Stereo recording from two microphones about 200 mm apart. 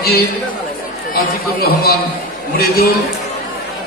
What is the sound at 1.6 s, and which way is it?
Speech, 50° left (ahead or behind).